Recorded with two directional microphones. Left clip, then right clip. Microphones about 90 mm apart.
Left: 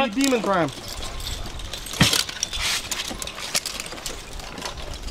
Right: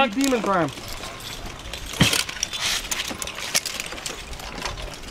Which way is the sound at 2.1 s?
Centre (ahead or behind).